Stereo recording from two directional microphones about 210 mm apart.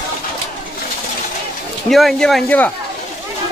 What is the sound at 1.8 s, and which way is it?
Speech, centre (ahead or behind).